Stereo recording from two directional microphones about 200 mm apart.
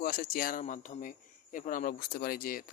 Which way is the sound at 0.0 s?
45° left (ahead or behind).